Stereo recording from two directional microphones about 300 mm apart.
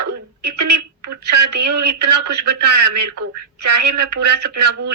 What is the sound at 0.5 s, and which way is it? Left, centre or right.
Speech, right.